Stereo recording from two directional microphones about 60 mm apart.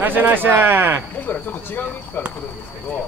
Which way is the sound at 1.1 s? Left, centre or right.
Left.